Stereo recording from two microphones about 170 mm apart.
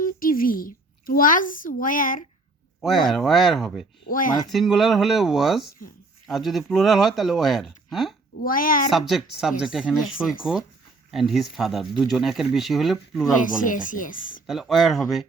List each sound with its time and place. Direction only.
0.0 s speech: 55° left (ahead or behind)
2.8 s speech: centre (ahead or behind)
4.1 s speech: 55° left (ahead or behind)
4.5 s speech: centre (ahead or behind)
8.4 s a woman's voice: 55° left (ahead or behind)
8.9 s speech: centre (ahead or behind)
13.4 s speech: 50° left (ahead or behind)
14.4 s speech: centre (ahead or behind)